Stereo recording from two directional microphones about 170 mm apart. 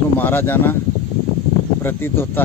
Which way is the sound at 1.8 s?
15° left (ahead or behind).